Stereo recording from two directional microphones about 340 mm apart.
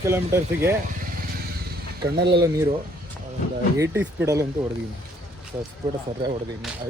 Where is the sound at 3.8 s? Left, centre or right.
Centre.